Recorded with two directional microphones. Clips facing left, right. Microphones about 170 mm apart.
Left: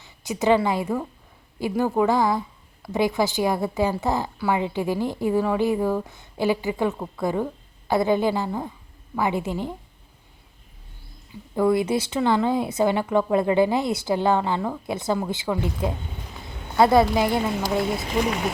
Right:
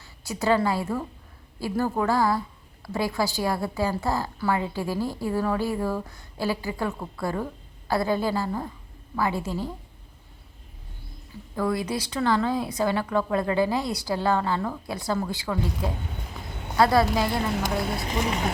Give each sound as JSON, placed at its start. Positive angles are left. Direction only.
{"t": 0.0, "sound": "a woman's voice", "side_deg": 20}
{"t": 11.5, "sound": "a woman's voice", "side_deg": 25}
{"t": 17.9, "sound": "speech", "side_deg": 0}